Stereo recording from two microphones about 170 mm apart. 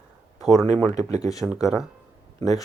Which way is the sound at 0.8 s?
20° left (ahead or behind).